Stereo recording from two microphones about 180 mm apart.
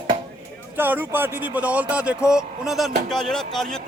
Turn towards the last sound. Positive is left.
turn(degrees=0)  # may be behind; listen again after turning